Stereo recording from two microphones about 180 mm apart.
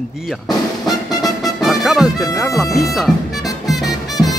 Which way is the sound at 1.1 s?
20° left (ahead or behind).